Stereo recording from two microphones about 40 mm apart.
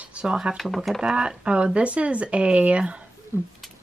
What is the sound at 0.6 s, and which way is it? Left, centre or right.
Cutlery, centre.